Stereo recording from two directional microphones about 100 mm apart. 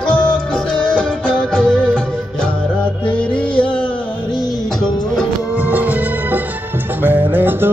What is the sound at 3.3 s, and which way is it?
Music, 10° left (ahead or behind).